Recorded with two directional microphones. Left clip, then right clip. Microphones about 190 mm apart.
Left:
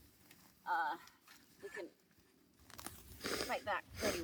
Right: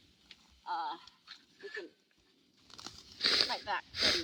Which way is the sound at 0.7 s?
25° left (ahead or behind).